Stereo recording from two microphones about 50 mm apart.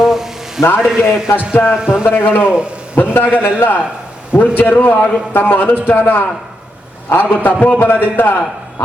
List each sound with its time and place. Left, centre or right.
0.0 s a sound: centre
0.6 s a man's voice: left
0.9 s a man's voice: centre
1.7 s a man's voice: centre
2.0 s a man's voice: left
2.4 s a man's voice: centre
3.2 s a man's voice: left